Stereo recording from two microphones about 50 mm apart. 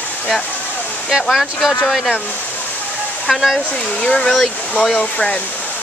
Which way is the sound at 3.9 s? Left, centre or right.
Centre.